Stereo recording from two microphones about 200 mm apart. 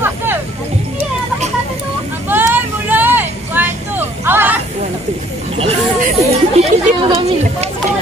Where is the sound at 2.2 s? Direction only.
10° right (ahead or behind).